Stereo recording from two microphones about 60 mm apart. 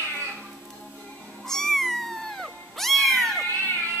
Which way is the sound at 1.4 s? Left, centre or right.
Centre.